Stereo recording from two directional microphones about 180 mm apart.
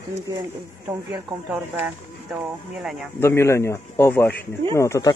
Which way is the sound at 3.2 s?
15° left (ahead or behind).